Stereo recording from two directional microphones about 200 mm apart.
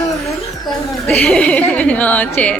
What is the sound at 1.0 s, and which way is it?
Speech, 5° left (ahead or behind).